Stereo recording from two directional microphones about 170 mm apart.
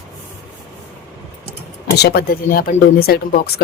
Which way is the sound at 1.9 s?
70° left (ahead or behind).